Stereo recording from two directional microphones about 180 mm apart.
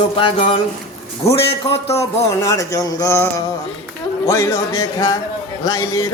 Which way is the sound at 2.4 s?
20° left (ahead or behind).